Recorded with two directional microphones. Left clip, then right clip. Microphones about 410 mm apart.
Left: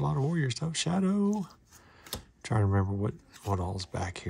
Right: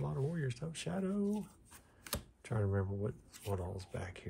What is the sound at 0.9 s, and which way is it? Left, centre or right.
Speech, left.